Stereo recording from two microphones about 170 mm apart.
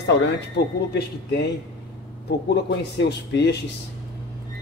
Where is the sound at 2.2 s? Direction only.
75° left (ahead or behind).